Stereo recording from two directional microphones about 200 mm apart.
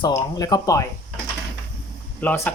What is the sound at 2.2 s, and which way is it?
Speech, 10° left (ahead or behind).